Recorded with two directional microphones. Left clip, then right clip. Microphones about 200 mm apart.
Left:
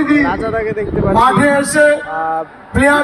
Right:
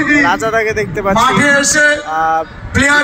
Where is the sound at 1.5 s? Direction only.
45° left (ahead or behind).